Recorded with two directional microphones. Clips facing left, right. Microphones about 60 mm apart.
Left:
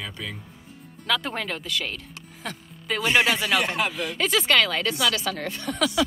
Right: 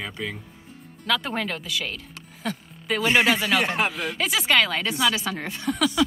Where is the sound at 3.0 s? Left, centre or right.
Right.